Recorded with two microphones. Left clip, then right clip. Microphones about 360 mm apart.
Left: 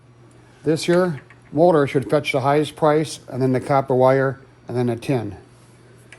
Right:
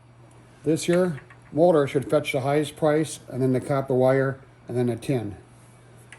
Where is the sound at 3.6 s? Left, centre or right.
Centre.